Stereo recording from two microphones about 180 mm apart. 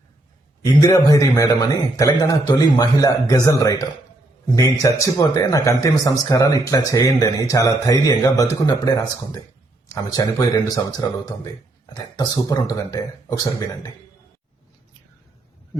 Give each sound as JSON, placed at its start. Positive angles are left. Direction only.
{"t": 0.6, "sound": "speech", "side_deg": 20}
{"t": 9.9, "sound": "speech", "side_deg": 20}